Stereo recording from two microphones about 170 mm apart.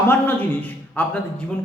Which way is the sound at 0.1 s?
10° left (ahead or behind).